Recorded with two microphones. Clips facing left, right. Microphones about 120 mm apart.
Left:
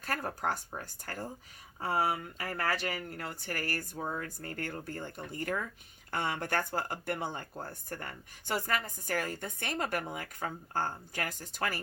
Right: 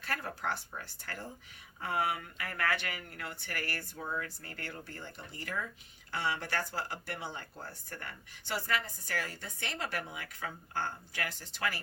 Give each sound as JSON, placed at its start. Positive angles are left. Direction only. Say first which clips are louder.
{"t": 0.0, "sound": "speech", "louder": "left 3 dB", "side_deg": 45}